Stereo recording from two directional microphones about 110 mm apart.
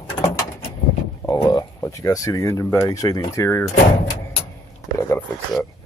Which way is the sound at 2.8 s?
35° left (ahead or behind).